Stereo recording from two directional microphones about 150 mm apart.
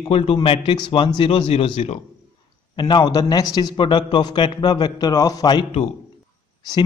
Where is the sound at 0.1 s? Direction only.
40° left (ahead or behind).